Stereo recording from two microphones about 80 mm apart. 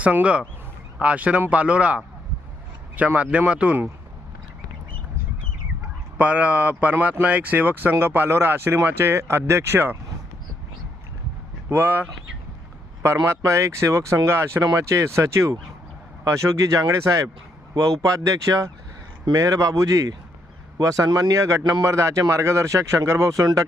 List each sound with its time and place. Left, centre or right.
0.0 s speech: centre
6.1 s speech: centre
11.7 s speech: right
13.2 s speech: right
14.6 s speech: right
21.6 s speech: right
21.8 s speech: right